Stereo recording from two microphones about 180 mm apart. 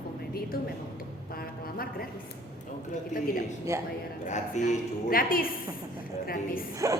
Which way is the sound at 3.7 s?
15° right (ahead or behind).